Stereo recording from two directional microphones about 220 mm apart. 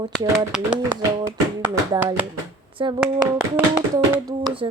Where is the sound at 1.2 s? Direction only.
10° right (ahead or behind).